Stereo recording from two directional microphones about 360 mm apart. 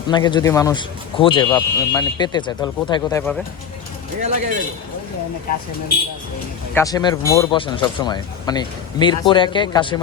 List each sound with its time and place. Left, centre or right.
0.1 s speech: centre
4.2 s speech: centre
6.7 s speech: centre